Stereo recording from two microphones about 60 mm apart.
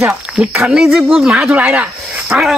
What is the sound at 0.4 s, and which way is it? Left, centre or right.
Speech, centre.